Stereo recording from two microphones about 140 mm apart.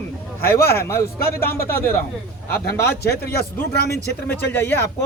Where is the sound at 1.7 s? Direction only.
15° left (ahead or behind).